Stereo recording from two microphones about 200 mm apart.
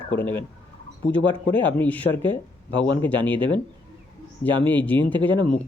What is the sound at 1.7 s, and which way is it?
Speech, 5° left (ahead or behind).